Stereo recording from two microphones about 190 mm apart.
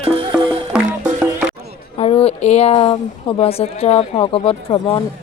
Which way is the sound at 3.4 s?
35° left (ahead or behind).